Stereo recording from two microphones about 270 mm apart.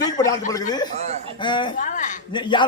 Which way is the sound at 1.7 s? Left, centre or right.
Left.